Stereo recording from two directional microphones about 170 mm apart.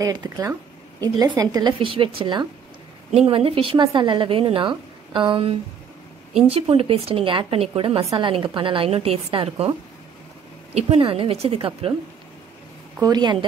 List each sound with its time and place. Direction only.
0.0 s a woman's voice: 20° right (ahead or behind)
8.0 s a woman's voice: 20° right (ahead or behind)
13.0 s speech: 25° right (ahead or behind)